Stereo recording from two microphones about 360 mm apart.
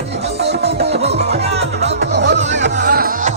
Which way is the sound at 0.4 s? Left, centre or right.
Right.